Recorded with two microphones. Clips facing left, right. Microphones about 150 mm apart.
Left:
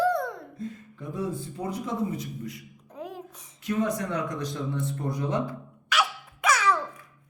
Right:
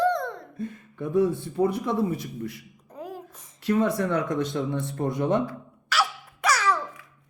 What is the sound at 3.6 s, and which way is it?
Speech, 70° right (ahead or behind).